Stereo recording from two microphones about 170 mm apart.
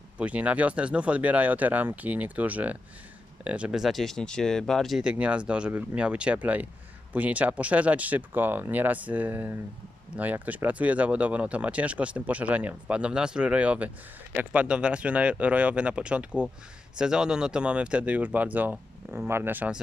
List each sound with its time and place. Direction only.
0.2 s speech: 10° right (ahead or behind)